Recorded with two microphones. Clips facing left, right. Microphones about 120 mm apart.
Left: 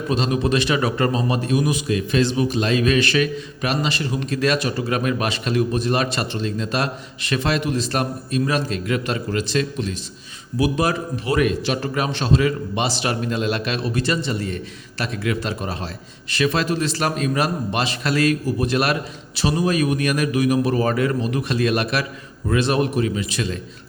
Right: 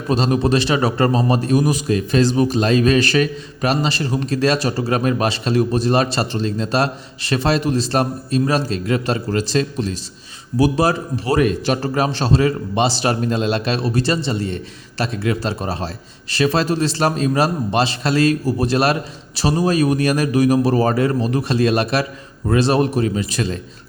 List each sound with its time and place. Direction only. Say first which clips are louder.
0.1 s a man's voice: right 4 dB; 40° right (ahead or behind)